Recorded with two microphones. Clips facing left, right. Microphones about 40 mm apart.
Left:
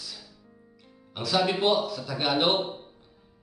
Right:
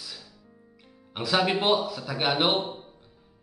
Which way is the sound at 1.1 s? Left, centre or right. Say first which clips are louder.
Right 1 dB; right.